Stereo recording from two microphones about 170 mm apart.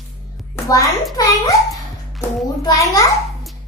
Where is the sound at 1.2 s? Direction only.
20° left (ahead or behind).